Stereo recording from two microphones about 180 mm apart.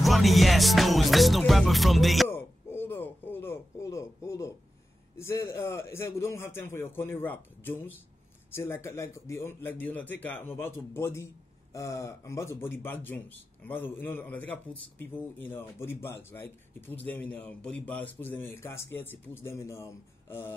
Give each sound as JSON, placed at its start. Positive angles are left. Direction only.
{"t": 0.0, "sound": "music", "side_deg": 0}
{"t": 2.2, "sound": "a sound", "side_deg": 15}
{"t": 5.1, "sound": "a man's voice", "side_deg": 15}